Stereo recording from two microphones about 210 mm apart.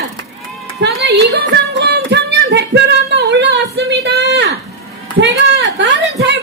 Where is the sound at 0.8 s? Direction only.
55° right (ahead or behind).